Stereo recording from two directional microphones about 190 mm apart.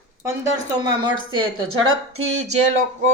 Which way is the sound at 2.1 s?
35° right (ahead or behind).